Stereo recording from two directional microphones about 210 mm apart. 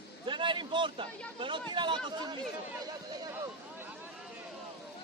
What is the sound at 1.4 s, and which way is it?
Speech, 25° right (ahead or behind).